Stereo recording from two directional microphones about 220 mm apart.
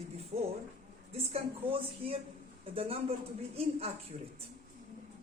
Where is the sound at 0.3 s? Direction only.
30° right (ahead or behind).